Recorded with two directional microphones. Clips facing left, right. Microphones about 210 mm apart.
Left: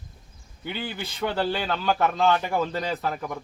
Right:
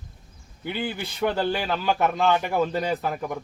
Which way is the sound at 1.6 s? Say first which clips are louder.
Even; 5° right (ahead or behind).